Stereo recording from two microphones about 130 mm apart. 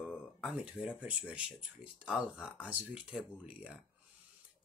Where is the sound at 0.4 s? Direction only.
5° right (ahead or behind).